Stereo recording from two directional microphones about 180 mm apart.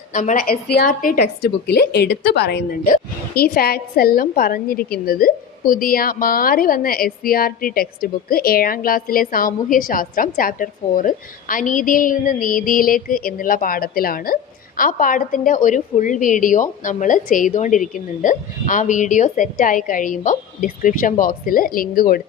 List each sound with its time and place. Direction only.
0.1 s a woman's voice: 45° left (ahead or behind)